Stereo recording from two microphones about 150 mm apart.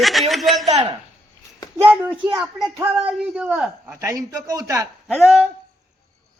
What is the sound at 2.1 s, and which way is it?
Speech, 30° right (ahead or behind).